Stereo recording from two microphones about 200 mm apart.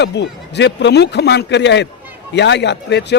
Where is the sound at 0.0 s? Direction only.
60° left (ahead or behind).